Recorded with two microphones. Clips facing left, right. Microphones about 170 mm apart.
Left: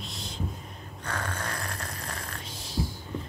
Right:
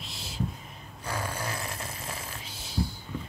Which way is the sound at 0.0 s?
Centre (ahead or behind).